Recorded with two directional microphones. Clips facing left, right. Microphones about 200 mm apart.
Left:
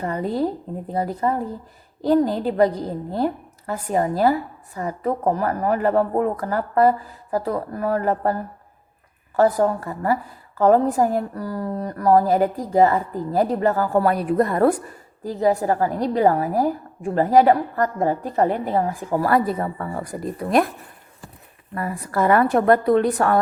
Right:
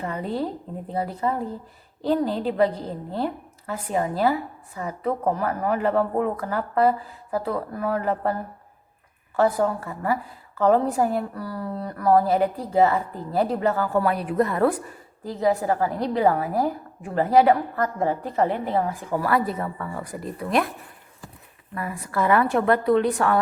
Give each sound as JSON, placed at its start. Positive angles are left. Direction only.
{"t": 0.0, "sound": "a woman's voice", "side_deg": 40}
{"t": 3.7, "sound": "a woman's voice", "side_deg": 40}
{"t": 21.8, "sound": "a woman's voice", "side_deg": 45}